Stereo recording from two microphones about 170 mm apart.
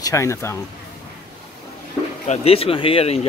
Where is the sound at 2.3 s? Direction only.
35° left (ahead or behind).